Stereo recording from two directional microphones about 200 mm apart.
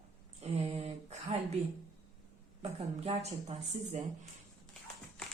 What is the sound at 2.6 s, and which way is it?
Speech, 30° right (ahead or behind).